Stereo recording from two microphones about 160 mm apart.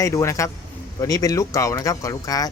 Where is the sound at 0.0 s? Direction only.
20° left (ahead or behind).